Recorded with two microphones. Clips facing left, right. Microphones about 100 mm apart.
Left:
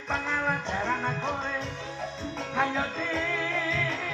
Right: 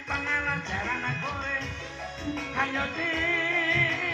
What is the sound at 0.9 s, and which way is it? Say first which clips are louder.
Music: left 4 dB; 25° left (ahead or behind).